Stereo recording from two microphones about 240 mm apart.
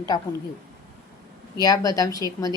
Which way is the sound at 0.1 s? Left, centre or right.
Centre.